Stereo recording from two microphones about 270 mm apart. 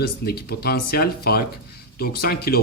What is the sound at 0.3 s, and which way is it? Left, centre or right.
Speech, left.